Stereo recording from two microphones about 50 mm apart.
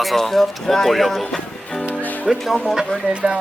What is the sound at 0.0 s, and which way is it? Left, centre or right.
A man's voice, centre.